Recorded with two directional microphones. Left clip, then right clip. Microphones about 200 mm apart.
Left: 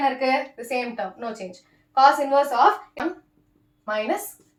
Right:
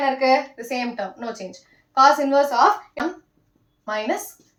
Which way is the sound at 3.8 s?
10° left (ahead or behind).